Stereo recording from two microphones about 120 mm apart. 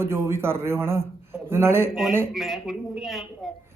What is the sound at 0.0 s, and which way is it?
A man's voice, 20° right (ahead or behind).